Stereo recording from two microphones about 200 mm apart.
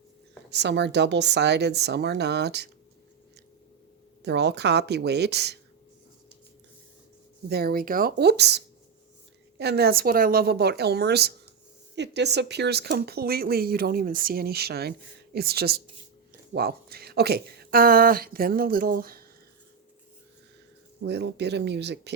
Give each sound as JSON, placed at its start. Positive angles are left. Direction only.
{"t": 0.5, "sound": "speech", "side_deg": -60}
{"t": 4.2, "sound": "speech", "side_deg": -55}
{"t": 7.4, "sound": "speech", "side_deg": -50}
{"t": 21.0, "sound": "speech", "side_deg": -55}